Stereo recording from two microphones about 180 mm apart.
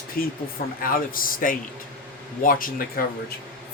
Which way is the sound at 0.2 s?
55° left (ahead or behind).